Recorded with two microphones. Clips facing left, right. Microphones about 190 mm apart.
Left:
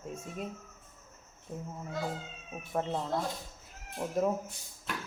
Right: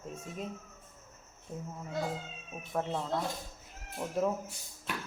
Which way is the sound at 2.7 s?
15° left (ahead or behind).